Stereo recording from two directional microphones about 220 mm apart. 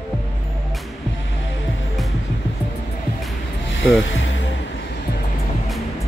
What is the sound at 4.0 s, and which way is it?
Speech, 55° left (ahead or behind).